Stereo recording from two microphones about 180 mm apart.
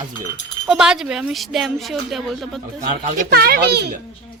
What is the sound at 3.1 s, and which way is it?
Speech, 55° right (ahead or behind).